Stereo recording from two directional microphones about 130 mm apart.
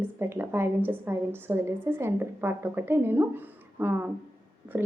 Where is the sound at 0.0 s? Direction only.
20° right (ahead or behind).